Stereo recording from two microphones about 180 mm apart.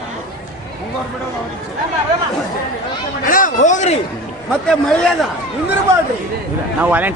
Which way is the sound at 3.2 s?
50° left (ahead or behind).